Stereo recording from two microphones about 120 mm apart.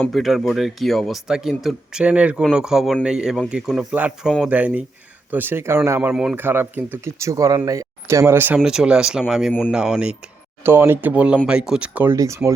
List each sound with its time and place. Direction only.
0.0 s speech: centre (ahead or behind); by 8.5 s 20° right (ahead or behind)
8.5 s speech: 5° right (ahead or behind)
9.5 s a man's voice: 10° left (ahead or behind)
9.7 s speech: 5° right (ahead or behind)
10.6 s speech: 20° right (ahead or behind)
12.1 s speech: 25° right (ahead or behind)